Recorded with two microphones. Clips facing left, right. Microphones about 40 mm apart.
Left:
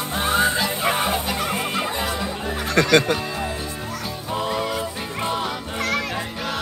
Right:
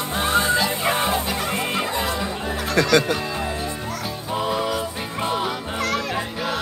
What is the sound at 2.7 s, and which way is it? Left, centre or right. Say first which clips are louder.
Speech: left 1 dB; left.